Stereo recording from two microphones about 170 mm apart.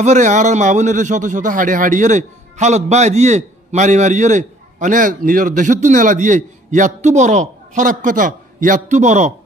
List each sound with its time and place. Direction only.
0.0 s speech: 45° right (ahead or behind)